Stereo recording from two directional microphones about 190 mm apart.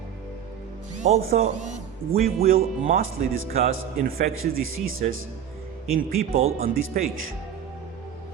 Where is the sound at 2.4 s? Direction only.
50° right (ahead or behind).